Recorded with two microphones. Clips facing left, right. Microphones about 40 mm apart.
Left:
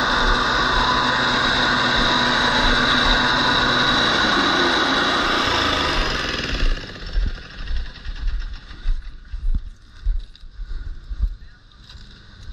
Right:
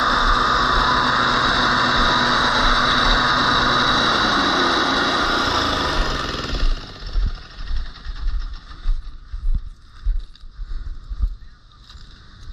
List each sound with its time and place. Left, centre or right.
0.0 s vehicle: left